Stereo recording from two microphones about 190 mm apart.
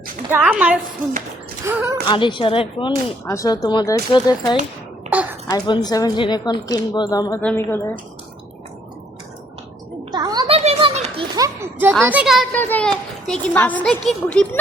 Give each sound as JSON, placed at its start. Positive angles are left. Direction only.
{"t": 0.3, "sound": "a woman's voice", "side_deg": -10}
{"t": 2.0, "sound": "speech", "side_deg": 25}
{"t": 3.2, "sound": "speech", "side_deg": 15}
{"t": 5.1, "sound": "a sound", "side_deg": -10}
{"t": 5.5, "sound": "a woman's voice", "side_deg": 20}
{"t": 10.1, "sound": "children playing", "side_deg": -20}
{"t": 12.0, "sound": "speech", "side_deg": -5}
{"t": 12.5, "sound": "a woman's voice", "side_deg": 10}